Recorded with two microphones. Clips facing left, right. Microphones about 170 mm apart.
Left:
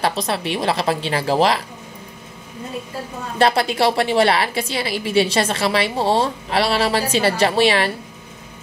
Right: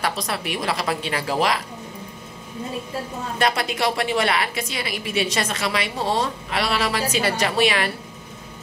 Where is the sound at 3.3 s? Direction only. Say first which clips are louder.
Left 6 dB; 30° left (ahead or behind).